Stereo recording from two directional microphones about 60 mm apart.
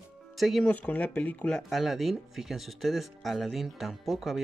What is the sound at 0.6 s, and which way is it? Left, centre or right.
Speech, left.